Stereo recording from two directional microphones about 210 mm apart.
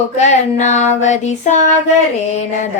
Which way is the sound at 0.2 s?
35° left (ahead or behind).